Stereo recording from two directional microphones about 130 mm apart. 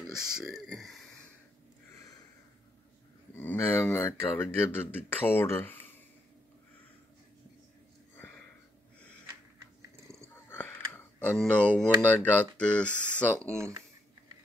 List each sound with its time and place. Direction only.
0.0 s speech: 5° right (ahead or behind)
3.3 s speech: 15° left (ahead or behind)
9.8 s dog: 20° right (ahead or behind)
10.3 s a sound: 15° left (ahead or behind)
11.2 s speech: 10° left (ahead or behind)
13.5 s speech: 20° right (ahead or behind)